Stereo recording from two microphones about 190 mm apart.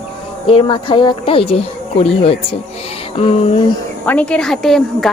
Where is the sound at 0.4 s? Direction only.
25° left (ahead or behind).